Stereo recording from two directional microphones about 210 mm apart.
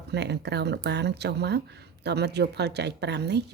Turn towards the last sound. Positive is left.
turn(degrees=-50)  # may be behind; listen again after turning